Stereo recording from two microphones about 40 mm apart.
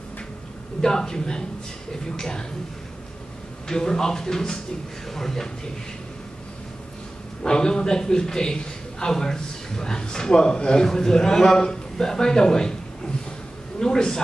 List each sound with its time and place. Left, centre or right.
0.7 s a man's voice: centre
3.6 s a man's voice: centre
7.4 s a man's voice: centre